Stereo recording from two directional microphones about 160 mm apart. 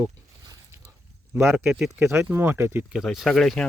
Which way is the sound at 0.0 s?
20° right (ahead or behind).